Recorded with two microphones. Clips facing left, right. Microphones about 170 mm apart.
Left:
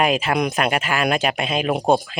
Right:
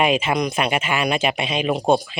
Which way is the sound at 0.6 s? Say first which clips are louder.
Left 1 dB; 40° left (ahead or behind).